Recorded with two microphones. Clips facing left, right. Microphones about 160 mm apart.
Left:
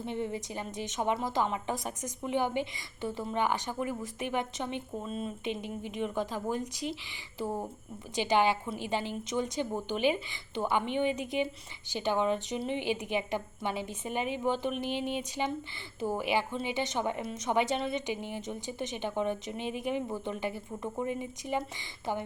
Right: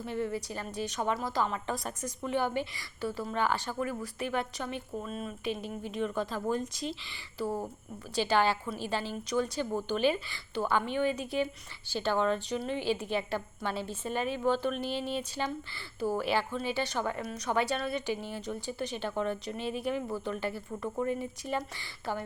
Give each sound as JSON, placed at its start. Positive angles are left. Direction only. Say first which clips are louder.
{"t": 0.0, "sound": "a woman's voice", "louder": "right 1 dB", "side_deg": 20}